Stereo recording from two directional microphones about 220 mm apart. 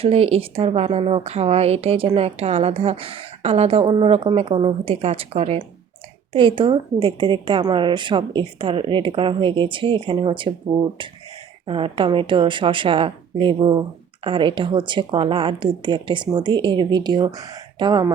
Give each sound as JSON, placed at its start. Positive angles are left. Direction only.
{"t": 0.0, "sound": "speech", "side_deg": -25}